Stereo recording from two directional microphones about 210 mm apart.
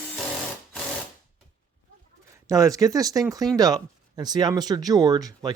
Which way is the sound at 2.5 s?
15° right (ahead or behind).